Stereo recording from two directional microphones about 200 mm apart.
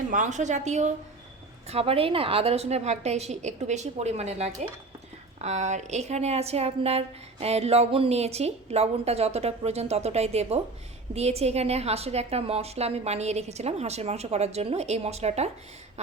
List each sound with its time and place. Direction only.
0.1 s a woman's voice: 40° right (ahead or behind)